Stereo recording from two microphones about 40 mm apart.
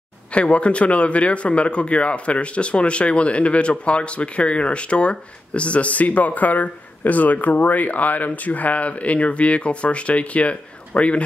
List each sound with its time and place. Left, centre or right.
0.3 s speech: left